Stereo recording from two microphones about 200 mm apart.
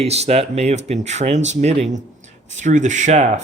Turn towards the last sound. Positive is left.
turn(degrees=-35)  # may be behind; listen again after turning